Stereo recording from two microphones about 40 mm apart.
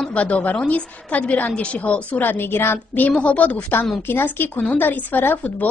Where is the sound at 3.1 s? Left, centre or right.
Left.